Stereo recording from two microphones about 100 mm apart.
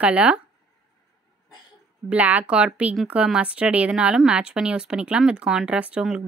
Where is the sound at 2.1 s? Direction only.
15° right (ahead or behind).